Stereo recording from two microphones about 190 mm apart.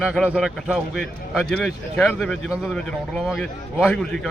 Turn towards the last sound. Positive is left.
turn(degrees=5)  # may be behind; listen again after turning